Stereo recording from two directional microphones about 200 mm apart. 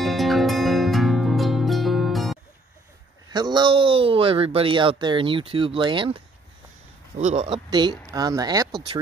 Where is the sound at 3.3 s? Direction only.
20° right (ahead or behind).